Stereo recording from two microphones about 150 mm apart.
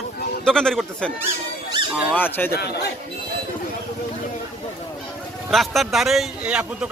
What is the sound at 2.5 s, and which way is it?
Speech, 90° left.